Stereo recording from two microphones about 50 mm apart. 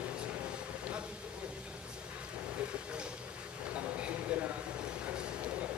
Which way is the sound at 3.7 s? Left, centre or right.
Right.